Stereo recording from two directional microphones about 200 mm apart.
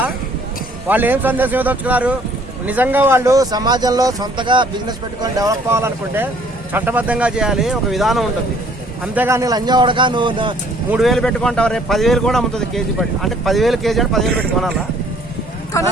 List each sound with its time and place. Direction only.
0.9 s a man's voice: 10° right (ahead or behind)
9.1 s a man's voice: 10° right (ahead or behind)
10.9 s a man's voice: centre (ahead or behind)